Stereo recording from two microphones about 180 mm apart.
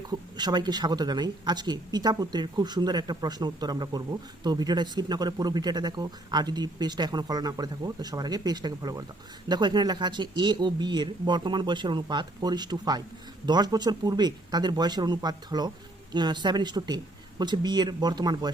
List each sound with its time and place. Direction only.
0.1 s speech: 25° right (ahead or behind)